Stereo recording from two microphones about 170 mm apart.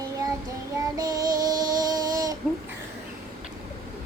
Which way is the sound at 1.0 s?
20° right (ahead or behind).